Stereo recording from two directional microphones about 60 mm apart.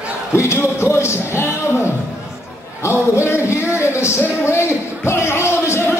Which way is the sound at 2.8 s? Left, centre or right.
Left.